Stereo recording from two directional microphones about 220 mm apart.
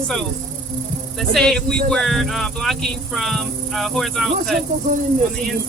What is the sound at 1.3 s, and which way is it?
Speech, centre (ahead or behind).